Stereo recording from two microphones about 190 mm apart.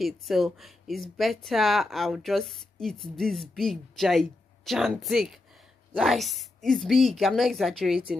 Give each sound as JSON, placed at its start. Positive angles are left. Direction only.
{"t": 0.0, "sound": "speech", "side_deg": 0}